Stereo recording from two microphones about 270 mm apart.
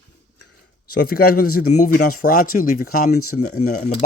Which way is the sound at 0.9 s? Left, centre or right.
Left.